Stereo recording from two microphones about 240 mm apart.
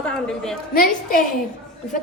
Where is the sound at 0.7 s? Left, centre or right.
Left.